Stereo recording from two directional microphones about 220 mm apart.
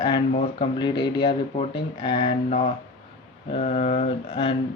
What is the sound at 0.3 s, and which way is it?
Speech, 25° left (ahead or behind).